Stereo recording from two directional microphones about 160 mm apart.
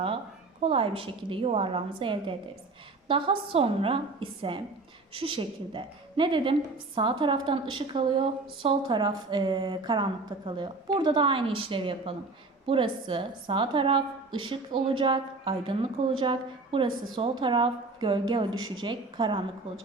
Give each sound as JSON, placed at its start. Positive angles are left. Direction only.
{"t": 0.6, "sound": "a woman's voice", "side_deg": -35}